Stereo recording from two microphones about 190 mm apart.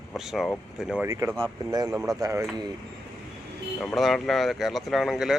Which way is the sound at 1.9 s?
Centre (ahead or behind).